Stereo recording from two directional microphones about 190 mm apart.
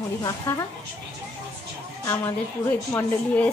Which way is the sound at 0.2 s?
15° left (ahead or behind).